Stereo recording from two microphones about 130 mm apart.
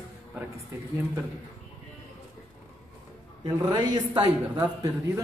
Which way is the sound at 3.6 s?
30° right (ahead or behind).